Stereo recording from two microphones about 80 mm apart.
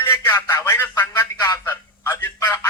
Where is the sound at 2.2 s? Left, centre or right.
Left.